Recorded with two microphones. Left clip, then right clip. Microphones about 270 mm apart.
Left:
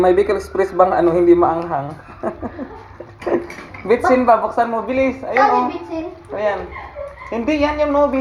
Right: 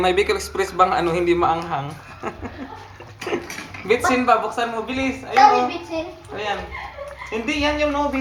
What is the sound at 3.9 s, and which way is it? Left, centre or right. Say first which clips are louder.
A woman's voice: left 4 dB; centre.